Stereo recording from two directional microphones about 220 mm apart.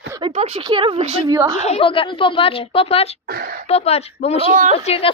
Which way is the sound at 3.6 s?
30° left (ahead or behind).